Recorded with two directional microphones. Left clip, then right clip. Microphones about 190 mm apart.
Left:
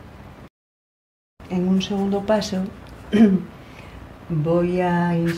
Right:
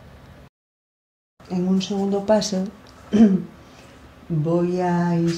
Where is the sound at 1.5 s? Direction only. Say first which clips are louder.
Left 1 dB; 25° right (ahead or behind).